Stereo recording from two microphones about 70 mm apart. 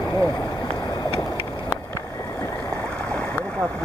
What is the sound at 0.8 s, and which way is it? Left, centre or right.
Vehicle, left.